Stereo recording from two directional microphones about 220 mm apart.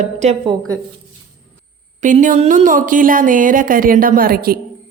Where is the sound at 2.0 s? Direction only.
35° right (ahead or behind).